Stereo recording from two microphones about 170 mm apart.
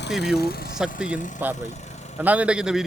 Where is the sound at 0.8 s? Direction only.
5° right (ahead or behind).